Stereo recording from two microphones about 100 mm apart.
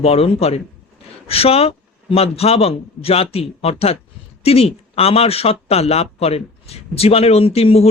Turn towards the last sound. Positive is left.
turn(degrees=85)